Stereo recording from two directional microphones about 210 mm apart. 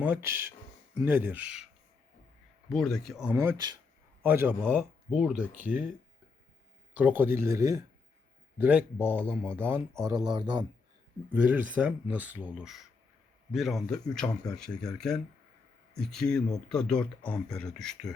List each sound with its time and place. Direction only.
0.0 s speech: 10° right (ahead or behind)
2.6 s speech: centre (ahead or behind)
3.3 s speech: 15° right (ahead or behind)
6.9 s speech: 10° right (ahead or behind)
11.3 s speech: 5° right (ahead or behind)